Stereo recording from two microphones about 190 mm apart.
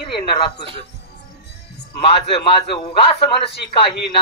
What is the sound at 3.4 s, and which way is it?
Speech, 60° left (ahead or behind).